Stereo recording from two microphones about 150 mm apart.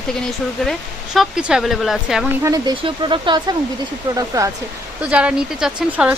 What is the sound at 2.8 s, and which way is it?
Speech, 30° right (ahead or behind).